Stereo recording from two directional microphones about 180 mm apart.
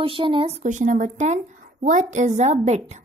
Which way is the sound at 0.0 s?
30° right (ahead or behind).